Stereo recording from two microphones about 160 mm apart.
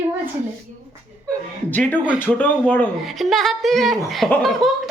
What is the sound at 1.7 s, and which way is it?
Speech, 10° left (ahead or behind).